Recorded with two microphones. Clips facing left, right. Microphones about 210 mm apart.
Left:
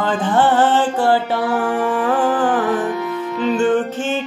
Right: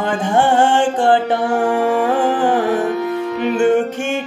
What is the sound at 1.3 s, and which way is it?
Music, 45° right (ahead or behind).